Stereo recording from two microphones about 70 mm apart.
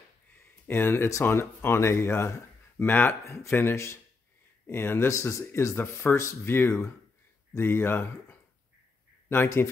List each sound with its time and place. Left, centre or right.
0.7 s speech: left
3.3 s speech: left